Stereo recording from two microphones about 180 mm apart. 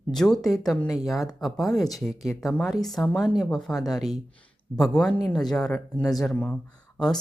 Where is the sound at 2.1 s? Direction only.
20° left (ahead or behind).